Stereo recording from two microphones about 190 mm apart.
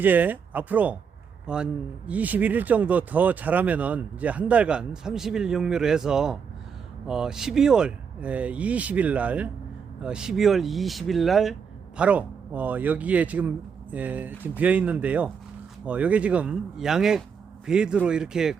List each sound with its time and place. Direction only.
0.0 s a man's voice: 10° right (ahead or behind)